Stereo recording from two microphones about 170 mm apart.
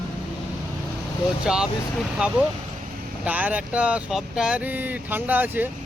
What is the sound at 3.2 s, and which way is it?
Speech, 10° right (ahead or behind).